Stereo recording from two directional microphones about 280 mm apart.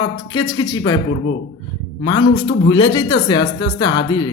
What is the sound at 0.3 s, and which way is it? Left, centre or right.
Speech, centre.